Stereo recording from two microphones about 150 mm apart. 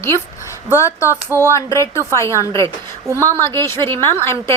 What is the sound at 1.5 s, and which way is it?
A woman's voice, 20° left (ahead or behind).